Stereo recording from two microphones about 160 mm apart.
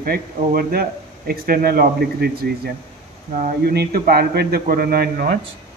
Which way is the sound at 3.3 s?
55° right (ahead or behind).